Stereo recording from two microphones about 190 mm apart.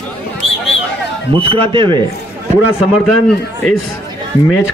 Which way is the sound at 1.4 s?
30° right (ahead or behind).